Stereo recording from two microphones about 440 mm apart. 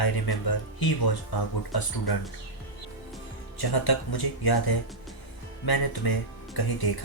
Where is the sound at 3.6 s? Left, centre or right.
Left.